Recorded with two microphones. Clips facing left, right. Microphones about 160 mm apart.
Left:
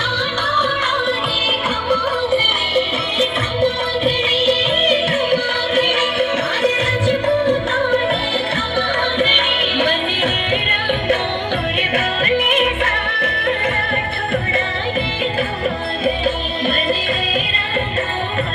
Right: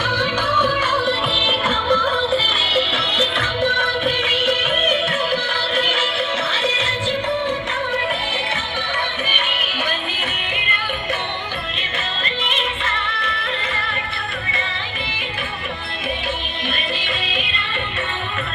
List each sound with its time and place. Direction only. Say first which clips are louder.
0.6 s music: even; centre (ahead or behind)
1.9 s music: left 2 dB; 10° left (ahead or behind)
4.4 s music: left 4 dB; 40° left (ahead or behind); by 7.9 s 60° left (ahead or behind)
9.5 s music: left 8 dB; 60° left (ahead or behind)
11.9 s music: left 9 dB; 60° left (ahead or behind)